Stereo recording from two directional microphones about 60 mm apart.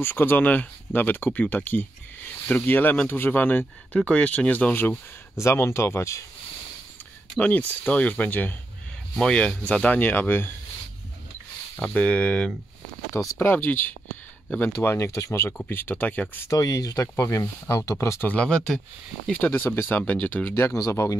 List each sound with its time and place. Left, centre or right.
0.0 s speech: left
5.4 s speech: left
7.3 s speech: left
9.3 s speech: centre
9.8 s speech: left
11.7 s speech: left
13.1 s speech: left
13.4 s speech: left
15.0 s speech: left
15.5 s speech: left
16.4 s speech: left
17.2 s speech: left
19.3 s speech: left
20.7 s speech: left